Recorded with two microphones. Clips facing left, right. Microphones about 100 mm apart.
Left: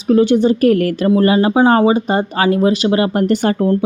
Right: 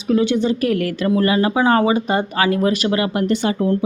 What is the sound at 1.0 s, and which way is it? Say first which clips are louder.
A woman's voice: left 4 dB; 30° left (ahead or behind).